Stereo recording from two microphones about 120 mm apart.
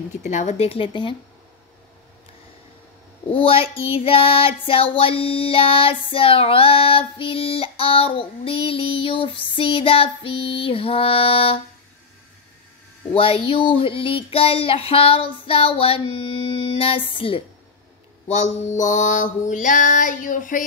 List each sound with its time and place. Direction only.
0.2 s a woman's voice: 80° left; by 1.1 s 45° left (ahead or behind)
3.3 s child singing: 50° left (ahead or behind)
13.1 s child singing: 50° left (ahead or behind)
18.3 s a sound: 80° left